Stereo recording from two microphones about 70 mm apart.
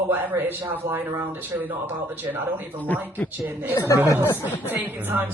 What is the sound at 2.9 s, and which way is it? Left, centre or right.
Speech, left.